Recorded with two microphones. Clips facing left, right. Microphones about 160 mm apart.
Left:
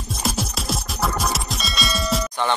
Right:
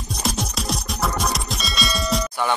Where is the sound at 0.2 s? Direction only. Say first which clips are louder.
Even; centre (ahead or behind).